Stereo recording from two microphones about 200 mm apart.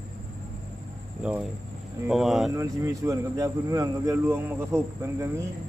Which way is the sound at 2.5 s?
15° right (ahead or behind).